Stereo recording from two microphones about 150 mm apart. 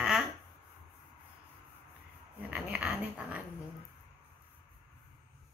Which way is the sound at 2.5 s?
10° right (ahead or behind).